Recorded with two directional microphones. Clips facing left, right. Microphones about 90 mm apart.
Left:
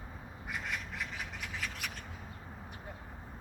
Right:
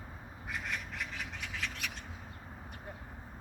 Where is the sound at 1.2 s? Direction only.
5° left (ahead or behind).